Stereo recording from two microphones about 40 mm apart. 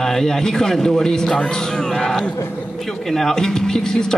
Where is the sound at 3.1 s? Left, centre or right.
Centre.